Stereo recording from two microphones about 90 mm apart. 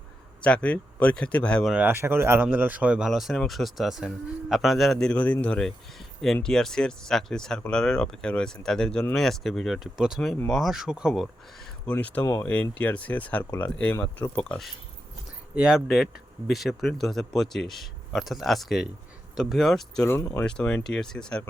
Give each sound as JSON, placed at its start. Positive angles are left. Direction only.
{"t": 0.4, "sound": "speech", "side_deg": 15}
{"t": 1.7, "sound": "a man's voice", "side_deg": -20}
{"t": 3.1, "sound": "speech", "side_deg": 0}
{"t": 10.2, "sound": "speech", "side_deg": 15}
{"t": 10.5, "sound": "speech", "side_deg": -5}
{"t": 11.9, "sound": "speech", "side_deg": 15}
{"t": 12.2, "sound": "speech", "side_deg": 30}
{"t": 12.8, "sound": "speech", "side_deg": 15}
{"t": 15.5, "sound": "speech", "side_deg": -5}
{"t": 20.1, "sound": "speech", "side_deg": 30}
{"t": 20.4, "sound": "speech", "side_deg": 10}